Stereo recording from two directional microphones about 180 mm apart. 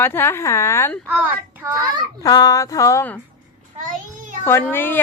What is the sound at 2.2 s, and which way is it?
Speech, 20° left (ahead or behind).